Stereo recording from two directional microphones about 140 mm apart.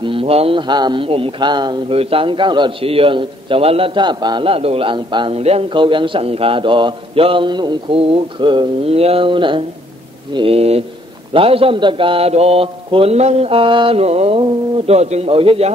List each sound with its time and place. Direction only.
0.0 s a man's voice: 40° right (ahead or behind)
5.4 s a man's voice: 45° right (ahead or behind)